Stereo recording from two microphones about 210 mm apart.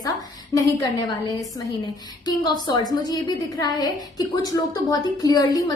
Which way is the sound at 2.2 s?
20° left (ahead or behind).